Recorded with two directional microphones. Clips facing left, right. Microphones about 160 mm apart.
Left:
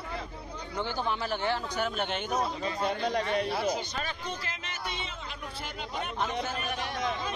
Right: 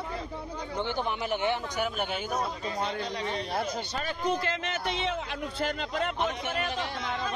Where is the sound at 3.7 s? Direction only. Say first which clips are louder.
Right 1 dB; 55° right (ahead or behind); by 6.1 s 90° right.